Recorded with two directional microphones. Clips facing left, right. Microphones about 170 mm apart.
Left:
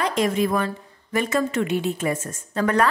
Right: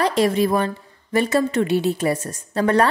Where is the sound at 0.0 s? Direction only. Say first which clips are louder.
Right 3 dB; 35° right (ahead or behind).